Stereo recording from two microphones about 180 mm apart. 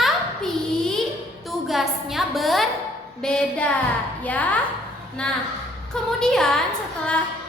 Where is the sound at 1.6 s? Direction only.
Centre (ahead or behind).